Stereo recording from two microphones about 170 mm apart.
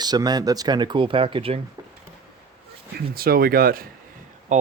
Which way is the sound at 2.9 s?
60° right (ahead or behind).